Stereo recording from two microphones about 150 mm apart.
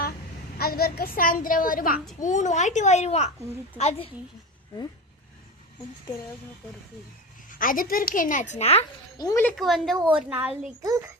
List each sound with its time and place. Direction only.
0.6 s a woman's voice: 90° left; by 2.0 s 70° left (ahead or behind)
2.1 s a child's voice: 55° left (ahead or behind)
7.6 s a woman's voice: 65° left (ahead or behind); by 8.8 s 45° left (ahead or behind)
9.1 s speech: 25° left (ahead or behind)
9.6 s a woman's voice: centre (ahead or behind)
10.1 s a woman's voice: 10° right (ahead or behind)